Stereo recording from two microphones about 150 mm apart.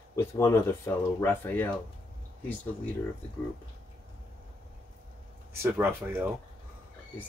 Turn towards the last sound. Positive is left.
turn(degrees=-15)  # may be behind; listen again after turning